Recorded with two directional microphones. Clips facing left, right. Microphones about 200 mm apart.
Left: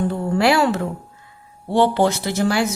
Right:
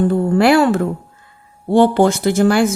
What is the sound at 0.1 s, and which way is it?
Speech, 55° right (ahead or behind).